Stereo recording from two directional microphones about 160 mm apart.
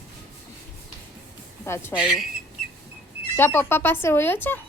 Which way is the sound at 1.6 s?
15° left (ahead or behind).